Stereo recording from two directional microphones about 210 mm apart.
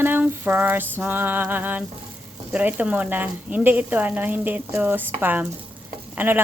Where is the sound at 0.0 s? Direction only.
10° right (ahead or behind).